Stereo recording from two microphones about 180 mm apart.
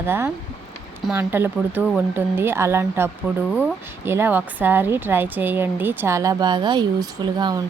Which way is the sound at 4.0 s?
10° right (ahead or behind).